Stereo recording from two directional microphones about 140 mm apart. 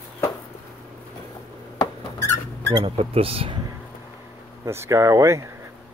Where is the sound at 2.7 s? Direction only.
40° right (ahead or behind).